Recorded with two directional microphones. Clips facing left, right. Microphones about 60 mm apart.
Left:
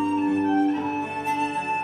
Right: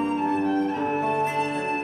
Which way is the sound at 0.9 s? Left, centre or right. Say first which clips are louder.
Right 3 dB; right.